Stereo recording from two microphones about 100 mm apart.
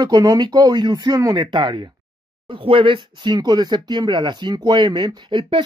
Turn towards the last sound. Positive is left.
turn(degrees=-55)  # may be behind; listen again after turning